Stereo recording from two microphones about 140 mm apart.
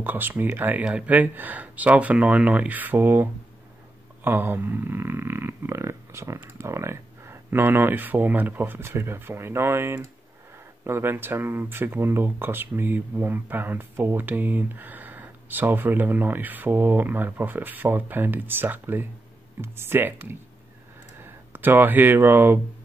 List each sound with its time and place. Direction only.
0.0 s speech: 15° right (ahead or behind)